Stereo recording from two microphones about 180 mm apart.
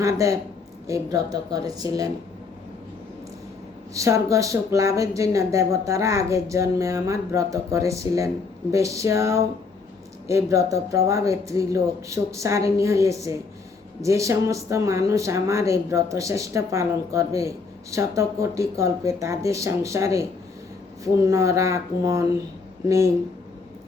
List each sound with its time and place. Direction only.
0.0 s a woman's voice: 15° right (ahead or behind)
3.9 s speech: 15° right (ahead or behind)